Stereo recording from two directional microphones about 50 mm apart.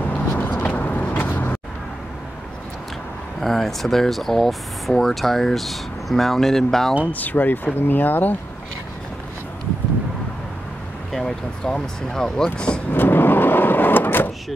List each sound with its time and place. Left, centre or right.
0.3 s vehicle: left
0.7 s vehicle: left
3.3 s speech: centre
7.1 s speech: left
11.1 s speech: centre
12.9 s vehicle: left